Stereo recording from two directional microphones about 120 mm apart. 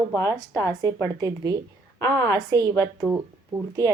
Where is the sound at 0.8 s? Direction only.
30° right (ahead or behind).